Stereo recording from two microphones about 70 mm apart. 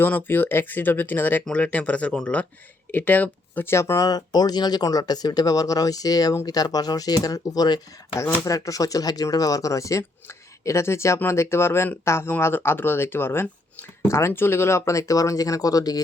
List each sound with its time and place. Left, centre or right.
0.0 s speech: left
3.7 s speech: left
4.0 s speech: left
8.4 s speech: left